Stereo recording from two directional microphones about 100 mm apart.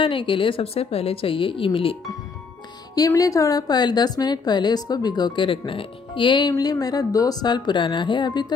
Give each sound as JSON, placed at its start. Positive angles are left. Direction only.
{"t": 0.0, "sound": "a woman's voice", "side_deg": 60}
{"t": 3.2, "sound": "a woman's voice", "side_deg": 35}
{"t": 6.5, "sound": "a woman's voice", "side_deg": 40}